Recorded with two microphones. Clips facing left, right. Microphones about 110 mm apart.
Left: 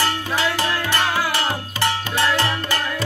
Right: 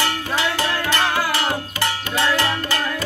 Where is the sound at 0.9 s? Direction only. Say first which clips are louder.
Right 1 dB; 15° right (ahead or behind).